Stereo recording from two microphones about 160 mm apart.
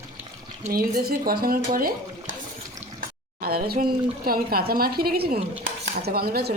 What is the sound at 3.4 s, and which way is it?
Speech, 75° right (ahead or behind).